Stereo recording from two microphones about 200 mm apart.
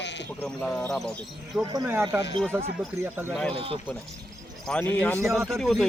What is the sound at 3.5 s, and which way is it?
Speech, 30° right (ahead or behind).